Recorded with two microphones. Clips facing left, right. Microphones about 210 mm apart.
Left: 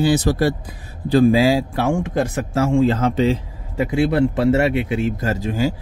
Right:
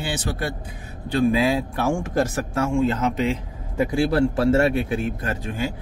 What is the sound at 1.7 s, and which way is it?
Speech, 20° left (ahead or behind).